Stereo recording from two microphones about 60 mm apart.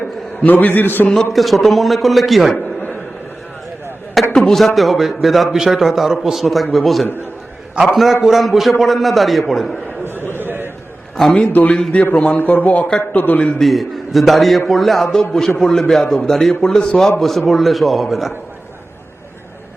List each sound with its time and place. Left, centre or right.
0.4 s a man's voice: left
1.1 s a man's voice: centre
4.4 s a man's voice: centre
10.3 s a sound: right
11.2 s a man's voice: centre
11.7 s speech: centre
13.6 s a man's voice: centre